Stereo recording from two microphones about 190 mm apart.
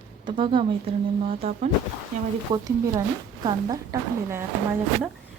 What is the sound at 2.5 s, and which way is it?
Speech, 20° right (ahead or behind).